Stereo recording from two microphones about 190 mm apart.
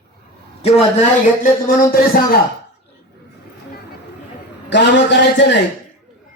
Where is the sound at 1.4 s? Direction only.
50° left (ahead or behind).